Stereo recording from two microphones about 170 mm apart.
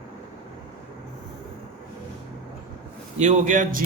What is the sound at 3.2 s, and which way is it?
Speech, 45° right (ahead or behind).